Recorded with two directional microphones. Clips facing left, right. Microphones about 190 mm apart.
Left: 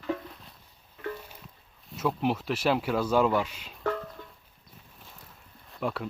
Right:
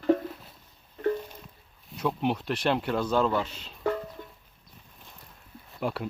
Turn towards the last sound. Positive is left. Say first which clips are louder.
# right 1 dB
turn(degrees=0)  # may be behind; listen again after turning